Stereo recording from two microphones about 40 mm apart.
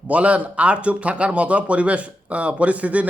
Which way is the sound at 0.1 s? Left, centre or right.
Right.